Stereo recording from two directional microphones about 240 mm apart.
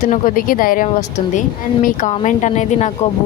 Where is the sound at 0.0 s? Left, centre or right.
Left.